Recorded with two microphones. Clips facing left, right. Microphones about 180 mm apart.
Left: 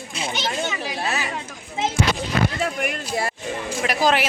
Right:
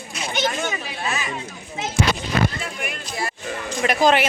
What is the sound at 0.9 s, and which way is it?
Chatter, 35° left (ahead or behind).